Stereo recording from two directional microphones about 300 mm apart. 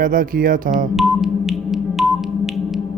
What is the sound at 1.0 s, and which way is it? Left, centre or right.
Music, centre.